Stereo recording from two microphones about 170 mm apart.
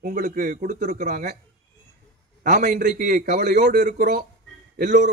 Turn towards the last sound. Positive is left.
turn(degrees=-55)  # may be behind; listen again after turning